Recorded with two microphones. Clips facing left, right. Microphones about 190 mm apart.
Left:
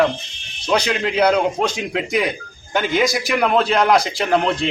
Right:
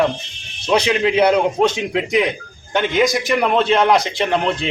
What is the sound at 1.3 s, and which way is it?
A man's voice, centre (ahead or behind).